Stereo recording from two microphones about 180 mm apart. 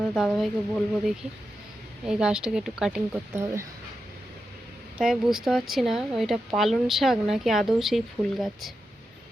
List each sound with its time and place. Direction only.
0.1 s speech: centre (ahead or behind)
3.3 s speech: 15° right (ahead or behind)
4.9 s speech: 5° right (ahead or behind)